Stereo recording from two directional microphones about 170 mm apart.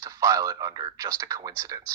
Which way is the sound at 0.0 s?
15° right (ahead or behind).